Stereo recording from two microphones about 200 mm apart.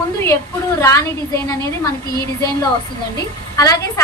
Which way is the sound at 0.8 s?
15° left (ahead or behind).